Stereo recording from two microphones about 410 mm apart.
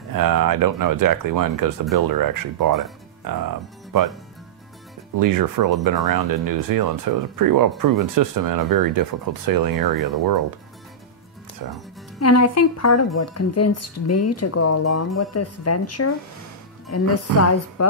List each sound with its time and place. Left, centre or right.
0.1 s speech: right
5.1 s speech: right
11.6 s speech: right
12.2 s speech: left